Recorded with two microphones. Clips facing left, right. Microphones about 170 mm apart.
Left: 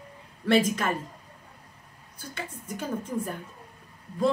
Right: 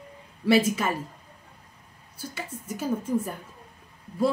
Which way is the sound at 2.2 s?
5° right (ahead or behind).